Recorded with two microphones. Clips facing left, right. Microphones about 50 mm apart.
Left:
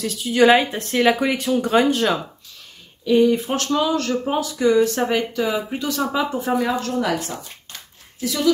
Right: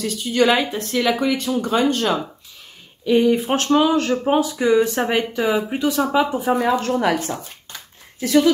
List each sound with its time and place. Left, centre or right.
0.0 s speech: centre
3.1 s speech: centre
3.4 s speech: right
7.0 s a woman's voice: right
8.2 s speech: right